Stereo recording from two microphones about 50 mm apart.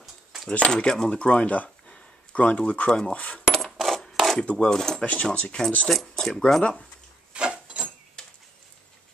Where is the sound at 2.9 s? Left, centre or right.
Centre.